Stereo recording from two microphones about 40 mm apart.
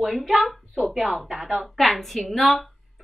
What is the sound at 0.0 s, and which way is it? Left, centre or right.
A woman's voice, centre.